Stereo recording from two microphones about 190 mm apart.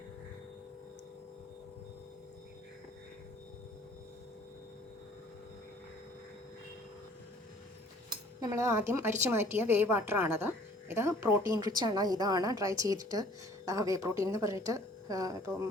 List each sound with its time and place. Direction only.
8.4 s a woman's voice: 15° right (ahead or behind)